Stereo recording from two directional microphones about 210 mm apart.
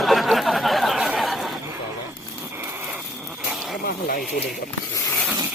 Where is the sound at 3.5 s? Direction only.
Centre (ahead or behind).